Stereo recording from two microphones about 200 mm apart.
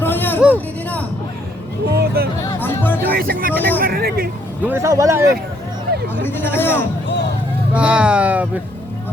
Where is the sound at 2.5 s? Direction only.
10° left (ahead or behind).